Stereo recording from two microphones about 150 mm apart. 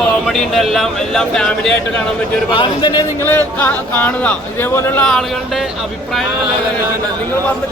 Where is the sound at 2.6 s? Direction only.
30° left (ahead or behind).